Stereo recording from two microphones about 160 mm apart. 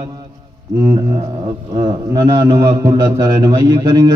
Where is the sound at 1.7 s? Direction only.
20° right (ahead or behind).